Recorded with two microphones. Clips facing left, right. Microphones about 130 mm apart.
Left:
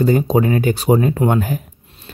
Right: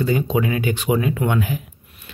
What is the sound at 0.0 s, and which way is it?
Speech, 40° left (ahead or behind).